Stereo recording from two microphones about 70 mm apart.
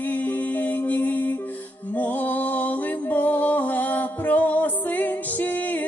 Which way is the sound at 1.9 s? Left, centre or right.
Left.